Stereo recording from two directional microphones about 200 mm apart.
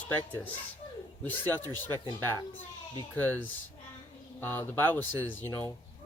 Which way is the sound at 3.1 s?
10° left (ahead or behind).